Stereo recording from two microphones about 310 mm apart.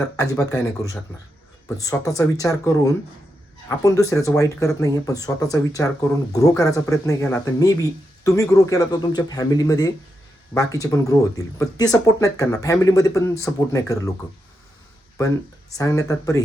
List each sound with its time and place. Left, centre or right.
0.2 s speech: centre
15.8 s speech: centre